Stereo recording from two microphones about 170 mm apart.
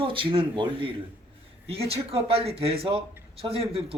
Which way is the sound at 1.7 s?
35° right (ahead or behind).